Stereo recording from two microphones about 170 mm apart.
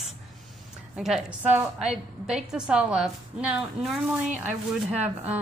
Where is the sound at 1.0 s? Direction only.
Centre (ahead or behind).